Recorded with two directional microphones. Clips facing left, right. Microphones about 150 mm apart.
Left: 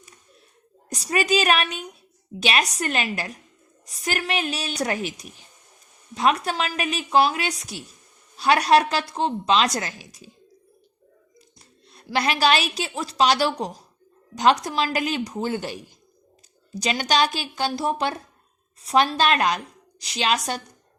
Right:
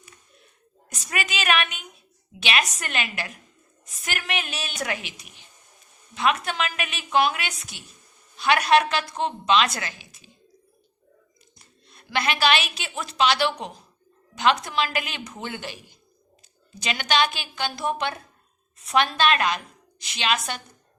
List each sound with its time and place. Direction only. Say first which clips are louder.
0.9 s a woman's voice: left 8 dB; 35° left (ahead or behind)
11.6 s a woman's voice: left 6 dB; 35° left (ahead or behind)